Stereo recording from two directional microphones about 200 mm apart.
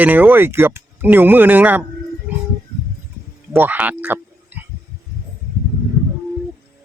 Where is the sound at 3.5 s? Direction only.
10° right (ahead or behind).